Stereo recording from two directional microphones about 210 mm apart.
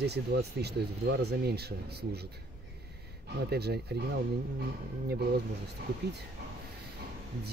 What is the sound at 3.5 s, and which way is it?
Speech, 50° right (ahead or behind).